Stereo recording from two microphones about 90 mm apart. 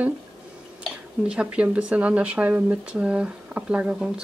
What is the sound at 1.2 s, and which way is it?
Speech, 10° right (ahead or behind).